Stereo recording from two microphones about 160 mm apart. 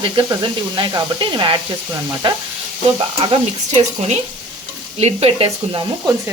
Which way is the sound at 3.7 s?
45° right (ahead or behind).